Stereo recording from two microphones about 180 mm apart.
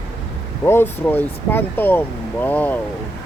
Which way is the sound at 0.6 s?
10° left (ahead or behind).